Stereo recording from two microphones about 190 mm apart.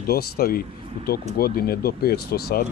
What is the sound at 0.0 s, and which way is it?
Speech, 55° left (ahead or behind).